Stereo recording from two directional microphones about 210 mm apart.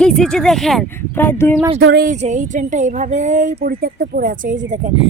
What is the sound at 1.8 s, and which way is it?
Speech, 50° right (ahead or behind).